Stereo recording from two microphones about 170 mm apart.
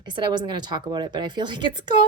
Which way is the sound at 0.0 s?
25° right (ahead or behind).